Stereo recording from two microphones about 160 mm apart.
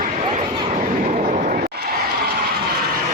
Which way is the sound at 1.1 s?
50° right (ahead or behind).